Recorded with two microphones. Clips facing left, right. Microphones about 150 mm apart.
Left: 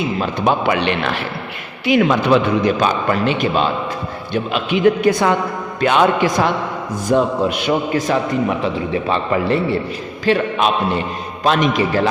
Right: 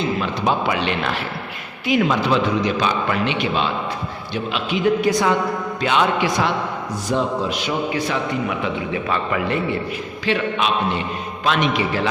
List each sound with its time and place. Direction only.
0.4 s a man's voice: 60° left (ahead or behind)
4.5 s a man's voice: 60° left (ahead or behind); by 12.0 s 40° left (ahead or behind)